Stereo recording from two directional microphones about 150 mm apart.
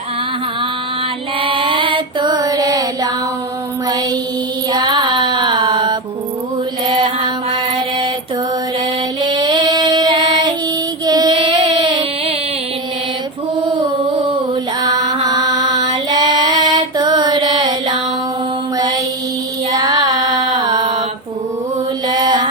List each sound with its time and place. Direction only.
1.4 s mantra: 35° right (ahead or behind)
4.7 s music: 30° right (ahead or behind)
6.8 s mantra: 30° right (ahead or behind)
9.2 s female singing: 30° right (ahead or behind)
11.0 s child singing: 25° right (ahead or behind)
14.8 s music: 25° right (ahead or behind)
19.7 s carnatic music: 25° right (ahead or behind)
22.0 s mantra: 25° right (ahead or behind)